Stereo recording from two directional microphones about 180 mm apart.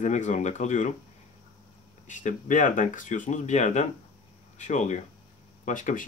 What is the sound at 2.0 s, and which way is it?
Speech, 45° left (ahead or behind).